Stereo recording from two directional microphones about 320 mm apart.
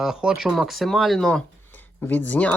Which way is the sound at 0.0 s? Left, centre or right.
Centre.